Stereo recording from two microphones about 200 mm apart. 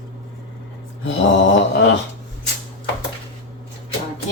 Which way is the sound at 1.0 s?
70° left (ahead or behind).